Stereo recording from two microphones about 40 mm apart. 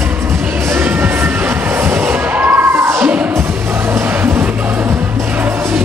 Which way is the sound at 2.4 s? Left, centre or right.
Right.